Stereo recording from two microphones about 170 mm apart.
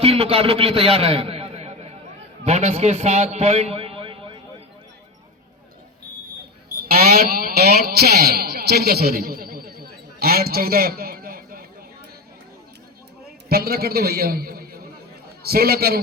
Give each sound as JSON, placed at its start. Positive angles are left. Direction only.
{"t": 0.0, "sound": "a man's voice", "side_deg": -35}
{"t": 6.8, "sound": "a sound", "side_deg": -60}
{"t": 13.5, "sound": "a man's voice", "side_deg": -65}